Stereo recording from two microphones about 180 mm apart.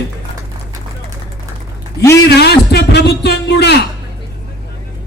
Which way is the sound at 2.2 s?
65° left (ahead or behind).